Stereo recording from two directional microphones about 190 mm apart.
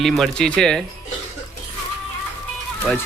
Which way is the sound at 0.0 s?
Centre (ahead or behind).